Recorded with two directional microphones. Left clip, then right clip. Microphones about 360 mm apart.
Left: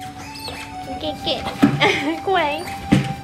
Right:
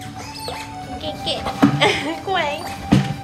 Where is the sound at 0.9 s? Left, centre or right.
Centre.